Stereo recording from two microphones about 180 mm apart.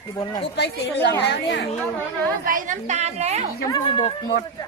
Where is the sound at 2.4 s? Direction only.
45° right (ahead or behind).